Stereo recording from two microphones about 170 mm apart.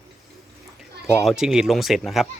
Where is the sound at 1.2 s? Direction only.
Centre (ahead or behind).